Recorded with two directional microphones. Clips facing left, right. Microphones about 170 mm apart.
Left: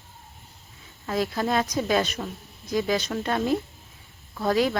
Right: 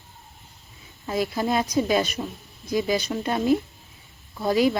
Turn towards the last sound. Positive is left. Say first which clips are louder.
# right 2 dB
turn(degrees=-10)  # may be behind; listen again after turning